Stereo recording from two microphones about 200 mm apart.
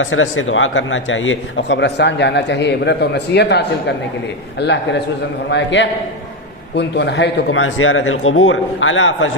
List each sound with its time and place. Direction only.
0.0 s speech: 80° left